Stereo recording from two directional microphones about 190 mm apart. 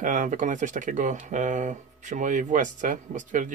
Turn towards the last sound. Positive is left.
turn(degrees=-40)  # may be behind; listen again after turning